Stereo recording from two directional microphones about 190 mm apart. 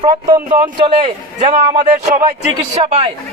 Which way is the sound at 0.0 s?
20° right (ahead or behind).